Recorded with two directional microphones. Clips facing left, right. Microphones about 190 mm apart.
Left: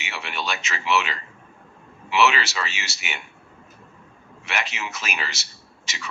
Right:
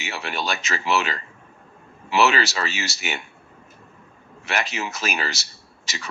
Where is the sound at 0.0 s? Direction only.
40° right (ahead or behind).